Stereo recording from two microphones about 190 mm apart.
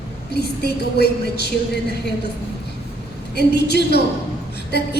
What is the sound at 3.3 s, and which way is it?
Speech, 60° left (ahead or behind).